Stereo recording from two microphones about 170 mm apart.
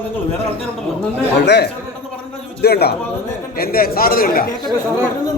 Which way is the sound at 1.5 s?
75° left (ahead or behind).